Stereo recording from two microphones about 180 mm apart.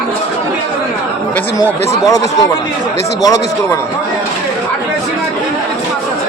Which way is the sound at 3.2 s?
20° left (ahead or behind).